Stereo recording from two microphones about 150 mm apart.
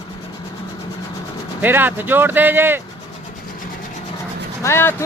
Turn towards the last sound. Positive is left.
turn(degrees=15)  # may be behind; listen again after turning